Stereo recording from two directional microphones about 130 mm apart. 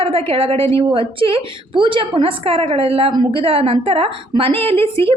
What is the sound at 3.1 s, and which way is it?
Speech, 35° right (ahead or behind).